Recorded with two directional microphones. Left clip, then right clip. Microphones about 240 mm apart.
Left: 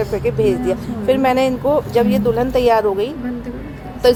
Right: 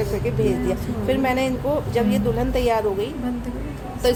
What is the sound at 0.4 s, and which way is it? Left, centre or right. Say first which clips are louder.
A woman's voice: left 5 dB; left.